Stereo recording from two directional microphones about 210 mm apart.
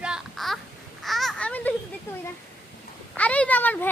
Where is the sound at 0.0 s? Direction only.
5° right (ahead or behind).